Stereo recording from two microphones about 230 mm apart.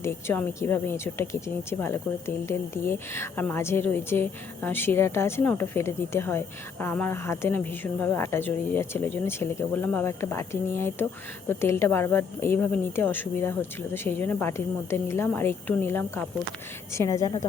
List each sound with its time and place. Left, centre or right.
0.0 s speech: centre